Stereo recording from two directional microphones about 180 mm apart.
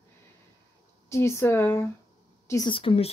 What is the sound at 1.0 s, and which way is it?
Speech, 15° left (ahead or behind).